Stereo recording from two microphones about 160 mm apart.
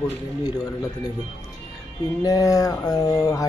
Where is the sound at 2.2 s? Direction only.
20° left (ahead or behind).